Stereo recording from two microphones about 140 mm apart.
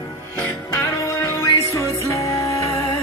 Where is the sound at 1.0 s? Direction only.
20° left (ahead or behind).